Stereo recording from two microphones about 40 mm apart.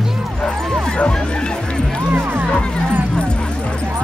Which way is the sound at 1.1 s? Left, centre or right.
Left.